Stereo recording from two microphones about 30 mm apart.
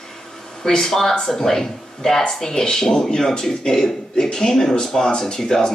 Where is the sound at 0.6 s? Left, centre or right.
Centre.